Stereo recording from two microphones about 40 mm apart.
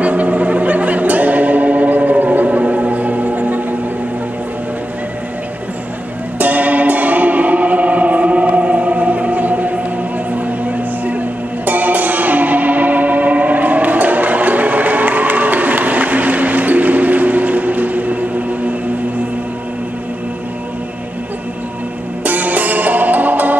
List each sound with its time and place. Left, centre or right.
0.0 s music: right
6.3 s music: right
11.1 s music: right
22.2 s music: right